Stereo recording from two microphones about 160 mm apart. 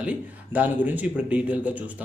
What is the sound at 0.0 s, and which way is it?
A man's voice, 10° right (ahead or behind).